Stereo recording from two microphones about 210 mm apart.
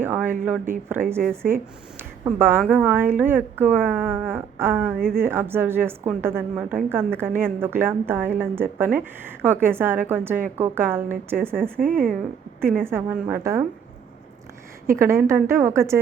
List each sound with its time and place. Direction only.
0.0 s speech: 10° right (ahead or behind)
1.2 s speech: 5° left (ahead or behind)
2.2 s a woman's voice: 10° right (ahead or behind)
11.8 s speech: 40° right (ahead or behind)
12.8 s a woman's voice: 10° right (ahead or behind)
14.8 s a woman's voice: 10° right (ahead or behind)